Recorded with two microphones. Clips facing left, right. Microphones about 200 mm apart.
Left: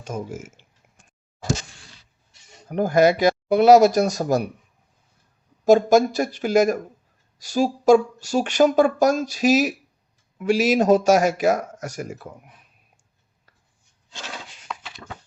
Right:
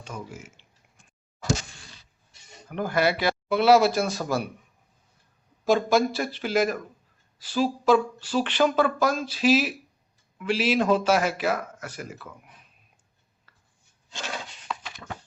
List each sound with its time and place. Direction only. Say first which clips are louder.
0.0 s speech: left 8 dB; 45° left (ahead or behind)
2.6 s speech: left 7 dB; 40° left (ahead or behind)
5.6 s speech: left 6 dB; 45° left (ahead or behind)